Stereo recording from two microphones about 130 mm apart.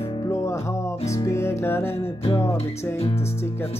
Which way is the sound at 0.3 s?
20° left (ahead or behind).